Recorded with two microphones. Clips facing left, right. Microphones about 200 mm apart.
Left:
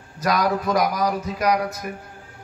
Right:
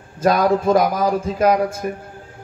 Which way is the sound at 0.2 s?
25° right (ahead or behind).